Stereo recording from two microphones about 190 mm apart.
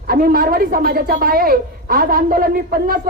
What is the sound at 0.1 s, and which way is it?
A woman's voice, 50° right (ahead or behind).